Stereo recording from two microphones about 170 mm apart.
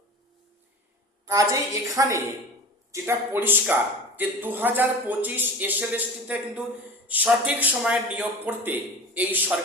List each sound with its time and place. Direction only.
1.3 s a woman's voice: 20° right (ahead or behind)